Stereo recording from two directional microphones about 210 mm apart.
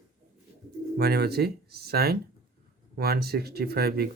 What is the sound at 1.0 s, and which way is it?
Speech, 50° right (ahead or behind).